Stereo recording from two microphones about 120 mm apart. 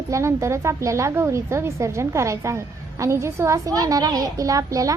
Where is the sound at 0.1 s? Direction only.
25° right (ahead or behind).